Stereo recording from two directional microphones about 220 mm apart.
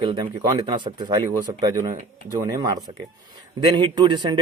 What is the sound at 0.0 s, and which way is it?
Speech, 20° right (ahead or behind).